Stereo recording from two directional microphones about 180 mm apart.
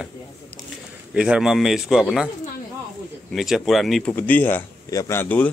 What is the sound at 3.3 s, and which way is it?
Speech, centre (ahead or behind).